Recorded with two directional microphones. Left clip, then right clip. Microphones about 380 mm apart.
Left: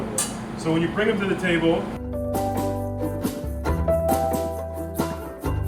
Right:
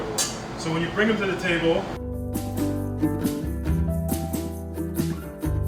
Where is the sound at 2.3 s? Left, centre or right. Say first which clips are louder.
Left 5 dB; centre.